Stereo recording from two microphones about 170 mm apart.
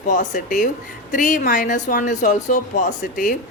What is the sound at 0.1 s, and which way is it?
A woman's voice, 50° left (ahead or behind).